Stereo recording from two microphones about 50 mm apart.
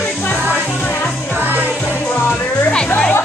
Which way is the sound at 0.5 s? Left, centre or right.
Left.